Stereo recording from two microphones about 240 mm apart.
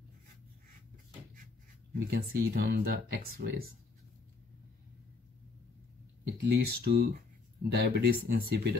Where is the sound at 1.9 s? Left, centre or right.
Right.